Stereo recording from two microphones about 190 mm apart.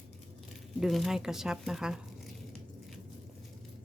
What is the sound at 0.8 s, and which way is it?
Speech, centre (ahead or behind).